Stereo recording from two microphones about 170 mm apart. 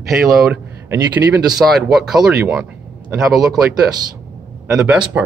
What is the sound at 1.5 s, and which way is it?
Speech, centre (ahead or behind).